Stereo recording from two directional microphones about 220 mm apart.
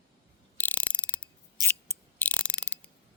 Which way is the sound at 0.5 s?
5° left (ahead or behind).